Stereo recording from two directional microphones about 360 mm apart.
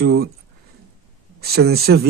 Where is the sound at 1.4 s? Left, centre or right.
Right.